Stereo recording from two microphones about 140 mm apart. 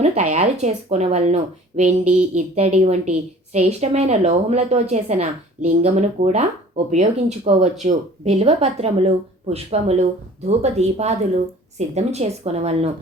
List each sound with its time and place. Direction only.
0.0 s a woman's voice: 55° right (ahead or behind)